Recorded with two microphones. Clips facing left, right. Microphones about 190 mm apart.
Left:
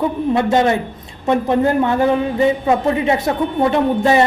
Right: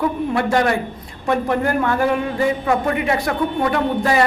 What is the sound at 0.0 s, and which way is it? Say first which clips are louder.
A man's voice: left 3 dB; 20° left (ahead or behind).